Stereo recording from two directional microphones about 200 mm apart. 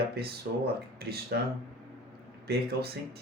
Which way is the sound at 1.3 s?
50° right (ahead or behind).